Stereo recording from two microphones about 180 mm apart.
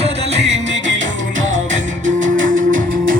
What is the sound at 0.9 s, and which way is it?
Music, 90° right.